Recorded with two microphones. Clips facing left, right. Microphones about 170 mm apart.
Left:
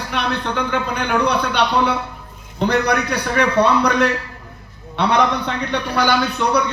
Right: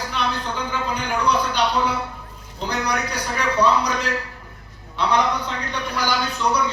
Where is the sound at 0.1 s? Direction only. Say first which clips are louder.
Left 6 dB; 65° left (ahead or behind).